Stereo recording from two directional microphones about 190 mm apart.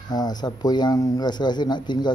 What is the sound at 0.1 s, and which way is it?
Speech, 20° left (ahead or behind).